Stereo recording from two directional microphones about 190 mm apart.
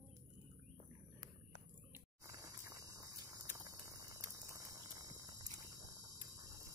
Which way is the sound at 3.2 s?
15° right (ahead or behind).